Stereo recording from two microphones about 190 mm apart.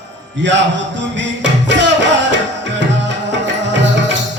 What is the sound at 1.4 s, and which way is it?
Music, 70° right (ahead or behind).